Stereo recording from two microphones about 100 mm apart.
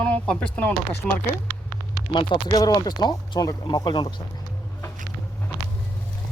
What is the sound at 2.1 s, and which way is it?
Speech, 45° left (ahead or behind).